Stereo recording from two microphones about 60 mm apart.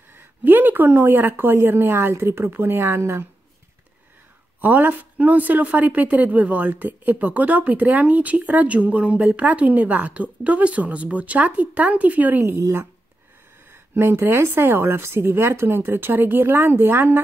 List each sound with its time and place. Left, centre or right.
0.4 s speech: right
4.6 s speech: right
12.4 s a woman's voice: right
13.9 s speech: right